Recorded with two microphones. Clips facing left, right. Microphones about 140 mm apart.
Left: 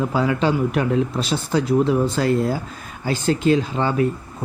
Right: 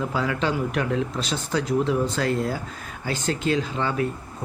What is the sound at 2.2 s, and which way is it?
Speech, 30° left (ahead or behind).